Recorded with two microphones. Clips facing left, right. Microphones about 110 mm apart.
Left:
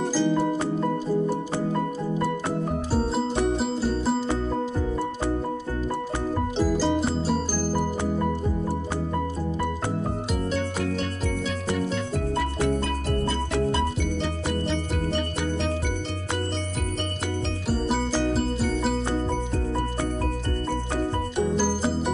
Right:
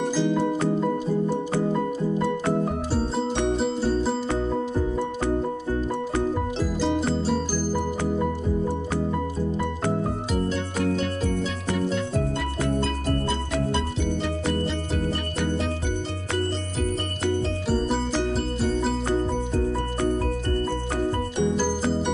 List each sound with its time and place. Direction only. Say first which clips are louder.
0.1 s music: left 2 dB; 5° left (ahead or behind)
6.6 s music: left 3 dB; centre (ahead or behind)
17.7 s music: even; 5° left (ahead or behind)
21.4 s music: left 1 dB; 5° left (ahead or behind)